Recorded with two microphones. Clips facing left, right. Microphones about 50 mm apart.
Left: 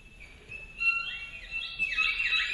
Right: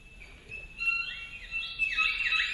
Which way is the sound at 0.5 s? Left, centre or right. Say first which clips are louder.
Left 2 dB; left.